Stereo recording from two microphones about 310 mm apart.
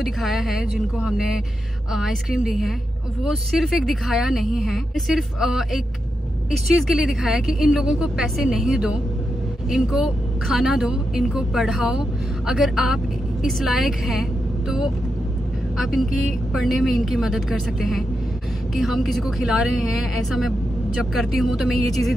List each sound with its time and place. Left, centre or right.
0.0 s a woman's voice: centre
15.8 s a woman's voice: centre